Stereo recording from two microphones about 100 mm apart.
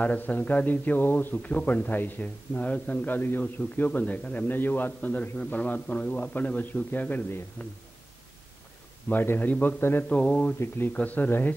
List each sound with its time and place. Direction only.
0.0 s a man's voice: 15° left (ahead or behind)
9.1 s a man's voice: 20° left (ahead or behind)
10.0 s a man's voice: 10° left (ahead or behind)